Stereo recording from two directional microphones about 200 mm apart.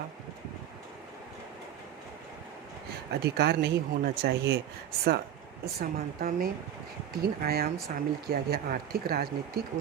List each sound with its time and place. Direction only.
3.1 s speech: 55° right (ahead or behind)
5.8 s speech: 50° right (ahead or behind)